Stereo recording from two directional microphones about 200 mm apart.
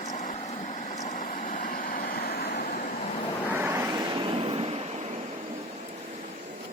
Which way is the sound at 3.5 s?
10° right (ahead or behind).